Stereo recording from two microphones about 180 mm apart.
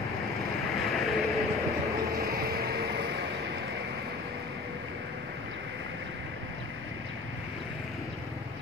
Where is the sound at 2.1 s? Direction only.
60° right (ahead or behind).